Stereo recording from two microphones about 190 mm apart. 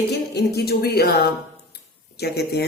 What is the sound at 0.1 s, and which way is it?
A woman's voice, 60° left (ahead or behind).